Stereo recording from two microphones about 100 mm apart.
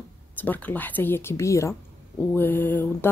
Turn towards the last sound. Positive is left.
turn(degrees=20)  # may be behind; listen again after turning